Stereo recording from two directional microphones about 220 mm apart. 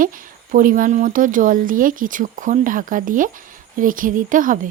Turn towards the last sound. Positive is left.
turn(degrees=-35)  # may be behind; listen again after turning